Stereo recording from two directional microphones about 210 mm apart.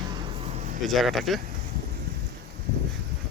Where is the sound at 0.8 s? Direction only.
Centre (ahead or behind).